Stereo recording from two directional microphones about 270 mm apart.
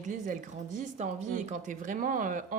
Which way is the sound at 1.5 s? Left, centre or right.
Right.